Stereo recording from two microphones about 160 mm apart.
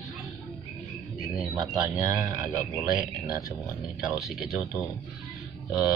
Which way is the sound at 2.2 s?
20° right (ahead or behind).